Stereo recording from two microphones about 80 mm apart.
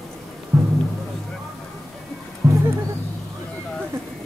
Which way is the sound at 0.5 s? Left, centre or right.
Right.